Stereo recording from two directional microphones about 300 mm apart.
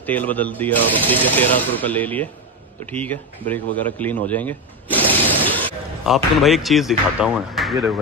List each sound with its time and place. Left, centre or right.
0.0 s a man's voice: centre